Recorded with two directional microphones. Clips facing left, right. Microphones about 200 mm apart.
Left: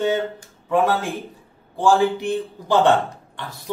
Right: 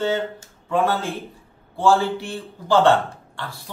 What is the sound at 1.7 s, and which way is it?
A man's voice, 15° left (ahead or behind).